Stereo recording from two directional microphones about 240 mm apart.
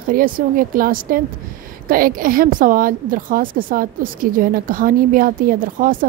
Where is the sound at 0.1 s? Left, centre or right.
Right.